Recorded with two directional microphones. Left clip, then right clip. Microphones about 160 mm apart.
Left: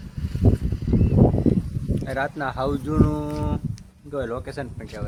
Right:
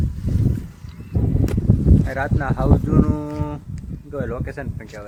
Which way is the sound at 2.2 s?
10° left (ahead or behind).